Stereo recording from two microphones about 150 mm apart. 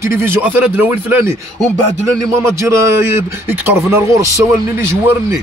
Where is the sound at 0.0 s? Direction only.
15° right (ahead or behind).